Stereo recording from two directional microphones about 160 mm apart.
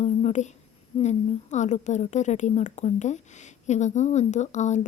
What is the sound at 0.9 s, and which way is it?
A woman's voice, 45° left (ahead or behind).